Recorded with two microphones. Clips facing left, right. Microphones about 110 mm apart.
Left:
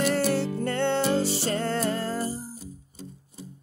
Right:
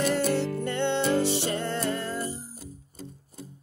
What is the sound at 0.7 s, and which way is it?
Music, 45° left (ahead or behind).